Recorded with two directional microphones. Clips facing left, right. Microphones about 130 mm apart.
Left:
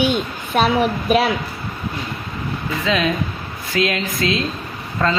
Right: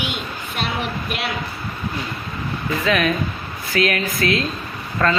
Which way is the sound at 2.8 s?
20° left (ahead or behind).